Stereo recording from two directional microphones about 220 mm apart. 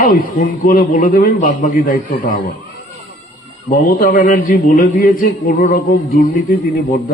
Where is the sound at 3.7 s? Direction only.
40° left (ahead or behind).